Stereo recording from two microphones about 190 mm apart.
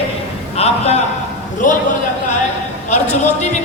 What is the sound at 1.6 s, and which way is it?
Speech, 45° left (ahead or behind).